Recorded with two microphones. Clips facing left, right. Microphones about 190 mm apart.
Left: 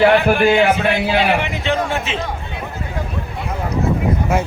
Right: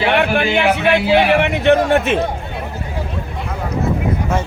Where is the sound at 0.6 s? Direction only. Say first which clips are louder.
Right 1 dB; 65° right (ahead or behind).